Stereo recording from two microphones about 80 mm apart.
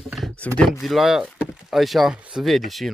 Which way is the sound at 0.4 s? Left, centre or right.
Centre.